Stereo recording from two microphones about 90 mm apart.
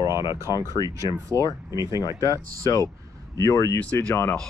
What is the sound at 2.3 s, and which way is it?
Speech, 40° left (ahead or behind).